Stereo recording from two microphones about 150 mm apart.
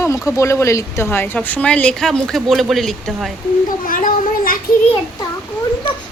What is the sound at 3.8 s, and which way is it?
Speech, 70° left (ahead or behind).